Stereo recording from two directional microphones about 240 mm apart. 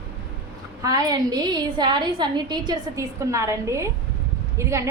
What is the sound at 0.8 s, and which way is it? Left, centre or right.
A woman's voice, centre.